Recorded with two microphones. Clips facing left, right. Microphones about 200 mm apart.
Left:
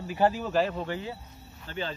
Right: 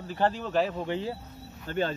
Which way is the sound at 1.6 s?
50° right (ahead or behind).